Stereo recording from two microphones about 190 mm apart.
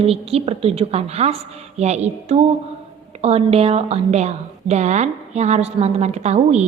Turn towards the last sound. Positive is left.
turn(degrees=-35)  # may be behind; listen again after turning